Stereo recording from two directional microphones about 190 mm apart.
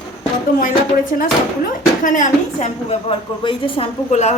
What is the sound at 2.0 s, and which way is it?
A woman's voice, 40° left (ahead or behind).